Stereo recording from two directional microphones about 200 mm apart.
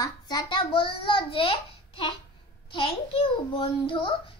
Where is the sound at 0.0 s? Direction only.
20° left (ahead or behind).